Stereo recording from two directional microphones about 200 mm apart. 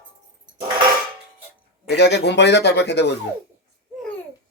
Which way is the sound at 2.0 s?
60° left (ahead or behind).